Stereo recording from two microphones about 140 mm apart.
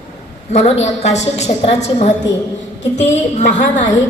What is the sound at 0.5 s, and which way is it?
A woman's voice, 55° left (ahead or behind).